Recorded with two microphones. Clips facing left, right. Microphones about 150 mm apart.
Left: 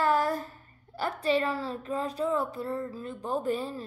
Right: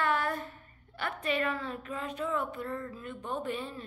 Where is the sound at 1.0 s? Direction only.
30° left (ahead or behind).